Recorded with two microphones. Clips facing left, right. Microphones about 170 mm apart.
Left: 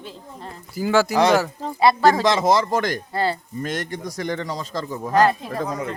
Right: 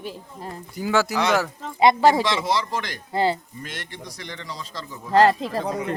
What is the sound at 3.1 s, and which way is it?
Speech, 15° right (ahead or behind).